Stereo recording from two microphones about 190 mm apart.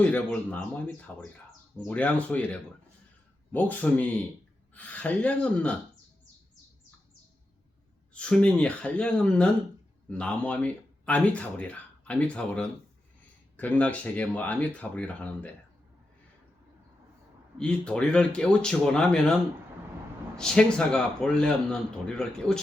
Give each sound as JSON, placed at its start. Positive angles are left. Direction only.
{"t": 0.0, "sound": "speech", "side_deg": 5}
{"t": 8.1, "sound": "a man's voice", "side_deg": 5}
{"t": 17.6, "sound": "a man's voice", "side_deg": 5}